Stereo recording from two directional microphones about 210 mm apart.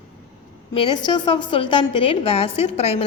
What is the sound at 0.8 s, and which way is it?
A woman's voice, 20° left (ahead or behind).